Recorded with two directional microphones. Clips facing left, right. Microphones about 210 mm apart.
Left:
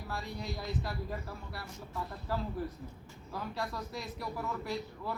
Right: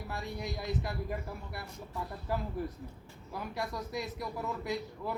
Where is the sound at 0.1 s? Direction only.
20° right (ahead or behind).